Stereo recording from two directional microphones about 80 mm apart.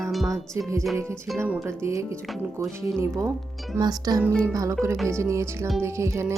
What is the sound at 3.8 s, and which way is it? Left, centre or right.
Music, right.